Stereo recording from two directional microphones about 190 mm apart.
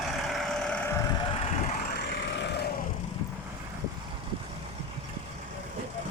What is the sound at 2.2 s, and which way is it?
Vehicle, 65° left (ahead or behind).